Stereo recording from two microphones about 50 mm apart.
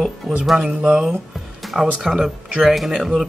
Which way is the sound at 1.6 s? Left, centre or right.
Centre.